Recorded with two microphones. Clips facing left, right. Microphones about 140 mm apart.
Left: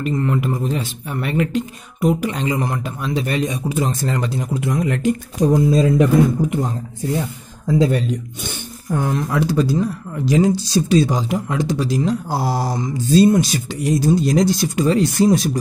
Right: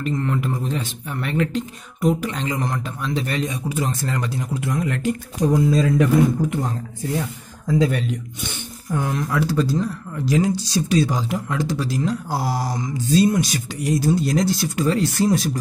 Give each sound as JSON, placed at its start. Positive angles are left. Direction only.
{"t": 0.0, "sound": "speech", "side_deg": 10}
{"t": 7.6, "sound": "speech", "side_deg": 30}